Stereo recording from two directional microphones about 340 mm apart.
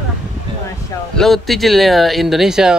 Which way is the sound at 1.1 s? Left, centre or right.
Centre.